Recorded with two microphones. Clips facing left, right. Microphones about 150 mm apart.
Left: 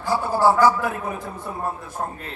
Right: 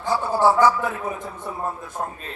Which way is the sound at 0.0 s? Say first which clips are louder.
Even; 20° right (ahead or behind).